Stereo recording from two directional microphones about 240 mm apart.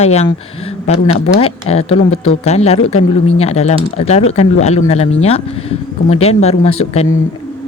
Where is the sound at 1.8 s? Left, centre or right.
Left.